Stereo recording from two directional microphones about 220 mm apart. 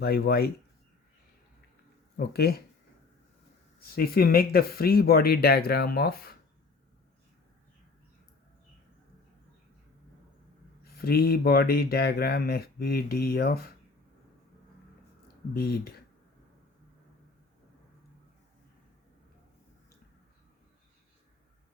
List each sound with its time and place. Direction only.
0.0 s speech: 45° left (ahead or behind)
2.1 s speech: 45° left (ahead or behind)
3.8 s speech: 45° left (ahead or behind)
10.9 s speech: 45° left (ahead or behind)
15.5 s speech: 45° left (ahead or behind)